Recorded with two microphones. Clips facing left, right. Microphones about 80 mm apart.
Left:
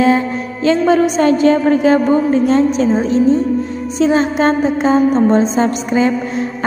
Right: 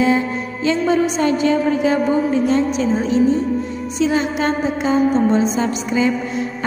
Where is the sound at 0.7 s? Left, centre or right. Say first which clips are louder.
Left 5 dB; left.